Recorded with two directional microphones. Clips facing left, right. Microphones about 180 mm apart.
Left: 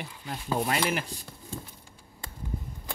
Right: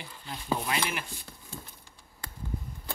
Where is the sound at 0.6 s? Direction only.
40° left (ahead or behind).